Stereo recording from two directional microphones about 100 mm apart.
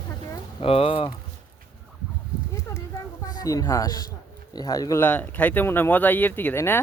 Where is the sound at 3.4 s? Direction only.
40° left (ahead or behind).